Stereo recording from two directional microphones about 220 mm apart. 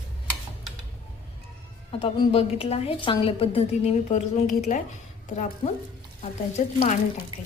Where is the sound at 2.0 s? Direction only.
25° left (ahead or behind).